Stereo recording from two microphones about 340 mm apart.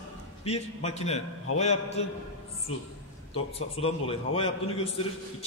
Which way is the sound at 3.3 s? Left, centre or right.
Centre.